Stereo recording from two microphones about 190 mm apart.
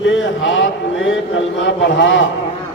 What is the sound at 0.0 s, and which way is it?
A man's voice, 75° left (ahead or behind).